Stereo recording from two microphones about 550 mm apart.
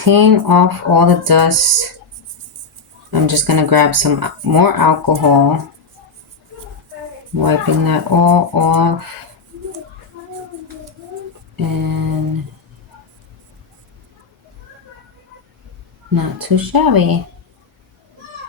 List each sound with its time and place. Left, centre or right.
0.0 s speech: right
3.1 s speech: right
7.3 s speech: right
11.5 s speech: right
16.1 s speech: right